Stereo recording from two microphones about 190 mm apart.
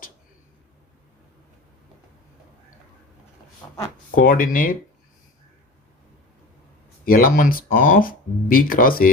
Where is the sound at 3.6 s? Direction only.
15° left (ahead or behind).